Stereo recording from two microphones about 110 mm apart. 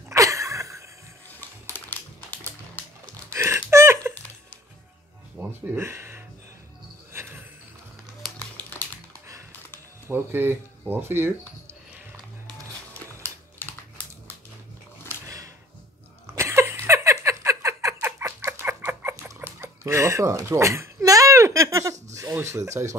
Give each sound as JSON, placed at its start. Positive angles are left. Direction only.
{"t": 0.1, "sound": "a sound", "side_deg": -30}
{"t": 1.7, "sound": "typing", "side_deg": 20}
{"t": 3.3, "sound": "a sound", "side_deg": -25}
{"t": 5.4, "sound": "music", "side_deg": -20}
{"t": 5.8, "sound": "speech", "side_deg": -25}
{"t": 8.4, "sound": "crumpling", "side_deg": 15}
{"t": 10.0, "sound": "speech", "side_deg": -20}
{"t": 13.2, "sound": "typing", "side_deg": 20}
{"t": 15.2, "sound": "a sound", "side_deg": -30}
{"t": 22.3, "sound": "speech", "side_deg": -25}